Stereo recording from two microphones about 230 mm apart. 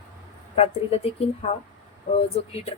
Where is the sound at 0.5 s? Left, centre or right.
Left.